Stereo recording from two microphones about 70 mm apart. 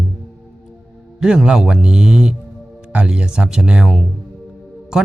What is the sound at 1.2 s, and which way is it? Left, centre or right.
Speech, centre.